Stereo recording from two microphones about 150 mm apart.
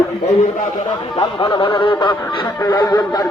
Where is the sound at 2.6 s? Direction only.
25° left (ahead or behind).